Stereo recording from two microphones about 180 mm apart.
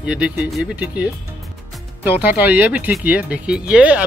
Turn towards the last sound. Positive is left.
turn(degrees=-5)  # may be behind; listen again after turning